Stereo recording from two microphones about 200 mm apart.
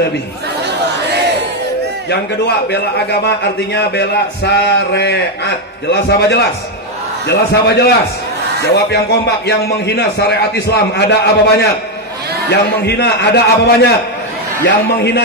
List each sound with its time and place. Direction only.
2.0 s a man's voice: 55° left (ahead or behind)
15.0 s a man's voice: 55° left (ahead or behind)